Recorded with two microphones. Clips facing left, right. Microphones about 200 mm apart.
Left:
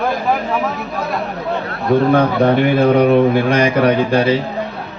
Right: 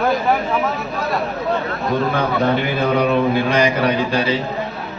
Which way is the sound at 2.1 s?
55° left (ahead or behind).